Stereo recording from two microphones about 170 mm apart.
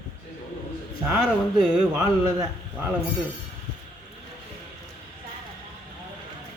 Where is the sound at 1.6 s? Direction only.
Centre (ahead or behind).